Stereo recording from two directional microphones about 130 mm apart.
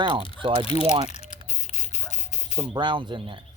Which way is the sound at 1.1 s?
60° left (ahead or behind).